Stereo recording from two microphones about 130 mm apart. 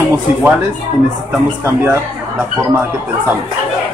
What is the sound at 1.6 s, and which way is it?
Speech, 20° right (ahead or behind).